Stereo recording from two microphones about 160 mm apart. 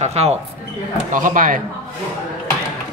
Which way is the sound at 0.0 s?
40° right (ahead or behind).